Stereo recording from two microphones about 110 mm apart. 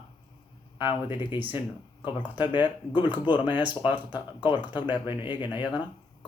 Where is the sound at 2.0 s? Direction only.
45° left (ahead or behind).